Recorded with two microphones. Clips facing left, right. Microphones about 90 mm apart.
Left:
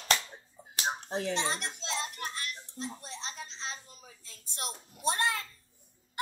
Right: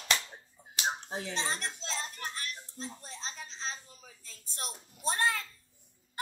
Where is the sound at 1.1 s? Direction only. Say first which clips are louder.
Left 5 dB; 55° left (ahead or behind).